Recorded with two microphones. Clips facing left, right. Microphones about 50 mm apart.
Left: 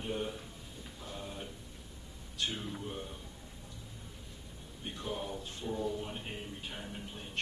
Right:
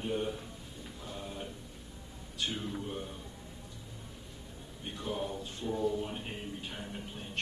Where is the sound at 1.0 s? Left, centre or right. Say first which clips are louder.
Right 1 dB; centre.